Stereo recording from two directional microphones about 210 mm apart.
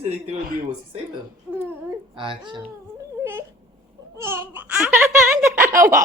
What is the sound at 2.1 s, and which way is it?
Speech, 25° right (ahead or behind).